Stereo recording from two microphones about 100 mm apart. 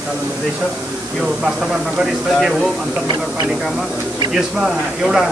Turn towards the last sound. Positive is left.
turn(degrees=-5)  # may be behind; listen again after turning